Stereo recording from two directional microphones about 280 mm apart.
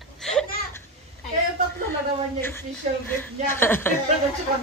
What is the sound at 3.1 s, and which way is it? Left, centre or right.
Speech, centre.